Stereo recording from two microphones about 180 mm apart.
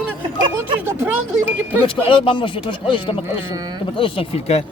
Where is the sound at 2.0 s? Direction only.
30° left (ahead or behind).